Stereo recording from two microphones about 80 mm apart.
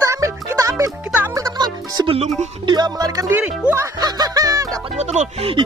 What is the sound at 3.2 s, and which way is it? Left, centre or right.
Speech, right.